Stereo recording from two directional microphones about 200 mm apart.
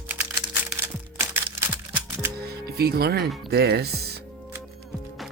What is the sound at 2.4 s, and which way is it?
Music, 50° right (ahead or behind).